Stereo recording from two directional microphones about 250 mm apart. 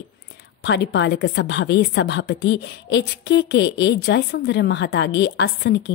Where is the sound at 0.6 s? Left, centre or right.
Left.